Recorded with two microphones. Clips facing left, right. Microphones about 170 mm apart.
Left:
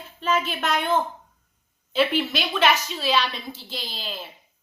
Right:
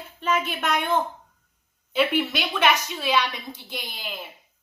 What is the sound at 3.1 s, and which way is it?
A child's voice, 15° right (ahead or behind).